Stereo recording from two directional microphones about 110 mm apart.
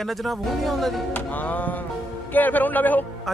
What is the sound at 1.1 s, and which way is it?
Speech, 15° left (ahead or behind).